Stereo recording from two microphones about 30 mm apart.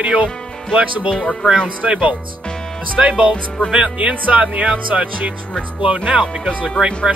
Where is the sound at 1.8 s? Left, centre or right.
Right.